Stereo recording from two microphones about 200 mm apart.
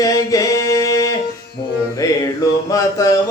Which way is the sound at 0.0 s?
15° left (ahead or behind).